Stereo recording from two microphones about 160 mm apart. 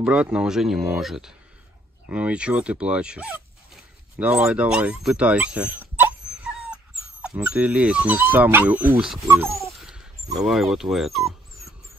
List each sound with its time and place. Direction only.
0.0 s speech: 5° right (ahead or behind)
9.3 s a sound: 15° right (ahead or behind)
9.7 s speech: 5° right (ahead or behind)